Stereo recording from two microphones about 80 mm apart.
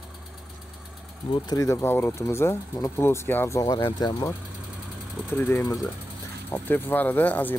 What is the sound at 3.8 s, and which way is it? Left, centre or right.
Speech, left.